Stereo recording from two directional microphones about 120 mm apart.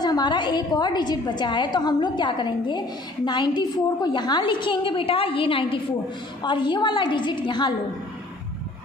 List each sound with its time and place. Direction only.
0.0 s a woman's voice: 35° left (ahead or behind)